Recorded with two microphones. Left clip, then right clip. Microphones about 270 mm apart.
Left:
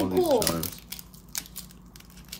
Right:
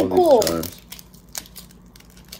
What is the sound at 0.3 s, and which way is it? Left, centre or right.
Speech, centre.